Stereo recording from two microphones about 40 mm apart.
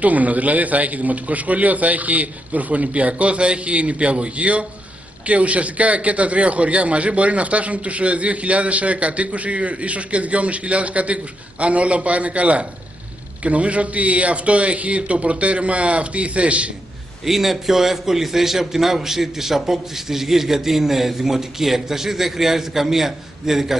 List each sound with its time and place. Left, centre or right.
0.0 s a man's voice: right
17.2 s a man's voice: centre